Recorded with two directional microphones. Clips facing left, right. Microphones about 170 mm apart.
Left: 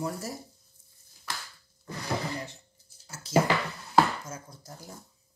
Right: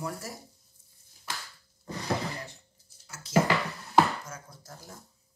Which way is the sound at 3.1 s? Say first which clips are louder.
Left 5 dB; 30° left (ahead or behind).